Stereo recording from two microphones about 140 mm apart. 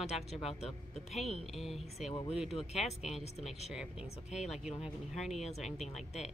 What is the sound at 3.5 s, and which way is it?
Speech, 50° left (ahead or behind).